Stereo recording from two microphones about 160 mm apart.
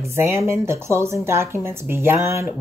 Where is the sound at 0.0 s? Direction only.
15° right (ahead or behind).